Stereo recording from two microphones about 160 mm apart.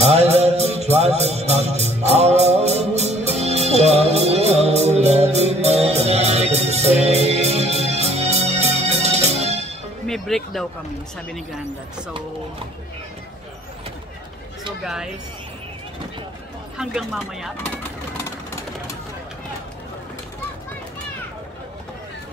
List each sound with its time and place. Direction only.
0.0 s music: 40° right (ahead or behind)
10.0 s speech: centre (ahead or behind)
16.7 s speech: 5° right (ahead or behind)
17.6 s vehicle: 15° left (ahead or behind)